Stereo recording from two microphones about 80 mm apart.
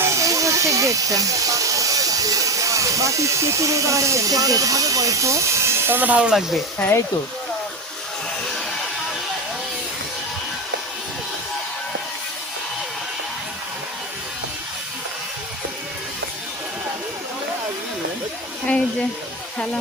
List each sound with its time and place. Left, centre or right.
0.0 s hiss: right; by 6.3 s centre